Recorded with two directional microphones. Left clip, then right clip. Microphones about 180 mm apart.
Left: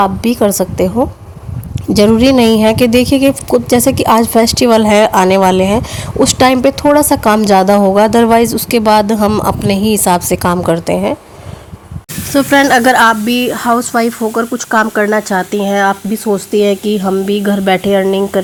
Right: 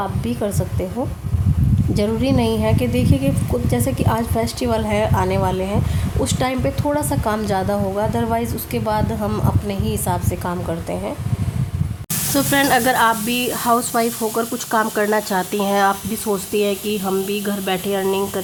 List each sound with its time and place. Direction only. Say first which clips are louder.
0.0 s a woman's voice: left 12 dB; 55° left (ahead or behind)
12.3 s speech: left 8 dB; 25° left (ahead or behind)